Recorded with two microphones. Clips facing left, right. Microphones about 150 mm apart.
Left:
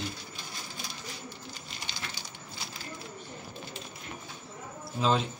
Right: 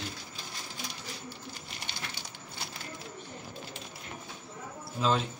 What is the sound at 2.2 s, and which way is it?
Crushing, 65° right (ahead or behind).